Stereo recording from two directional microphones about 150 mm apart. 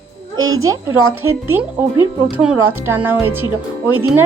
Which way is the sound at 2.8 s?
15° right (ahead or behind).